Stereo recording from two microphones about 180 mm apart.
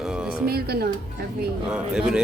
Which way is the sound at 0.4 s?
60° right (ahead or behind).